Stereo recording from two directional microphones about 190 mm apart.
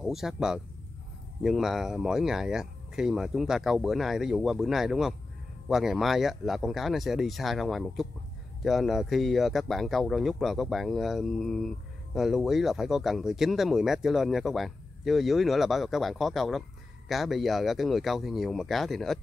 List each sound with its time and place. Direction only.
0.0 s speech: centre (ahead or behind)